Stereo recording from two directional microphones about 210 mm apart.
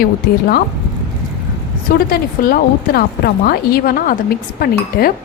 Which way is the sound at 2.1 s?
45° left (ahead or behind).